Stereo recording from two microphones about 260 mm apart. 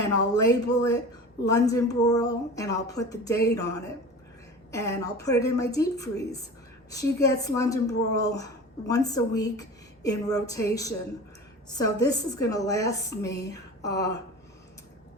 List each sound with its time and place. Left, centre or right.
0.3 s a woman's voice: centre
4.7 s a woman's voice: centre